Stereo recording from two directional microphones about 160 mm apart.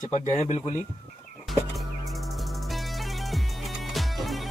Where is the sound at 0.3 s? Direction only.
45° left (ahead or behind).